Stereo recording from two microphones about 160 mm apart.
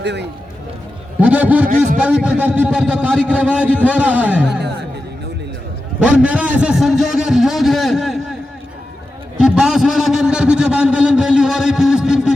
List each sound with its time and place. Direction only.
0.0 s speech: 90° right
1.2 s a man's voice: 10° right (ahead or behind)
6.0 s a man's voice: 5° right (ahead or behind)
9.4 s a man's voice: 5° right (ahead or behind)